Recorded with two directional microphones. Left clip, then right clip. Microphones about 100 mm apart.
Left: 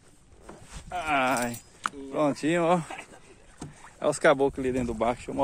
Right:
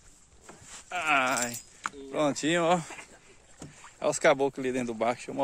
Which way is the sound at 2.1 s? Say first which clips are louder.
Left 1 dB; 50° right (ahead or behind).